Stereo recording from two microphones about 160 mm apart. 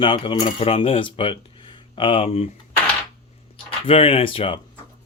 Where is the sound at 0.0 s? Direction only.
30° left (ahead or behind).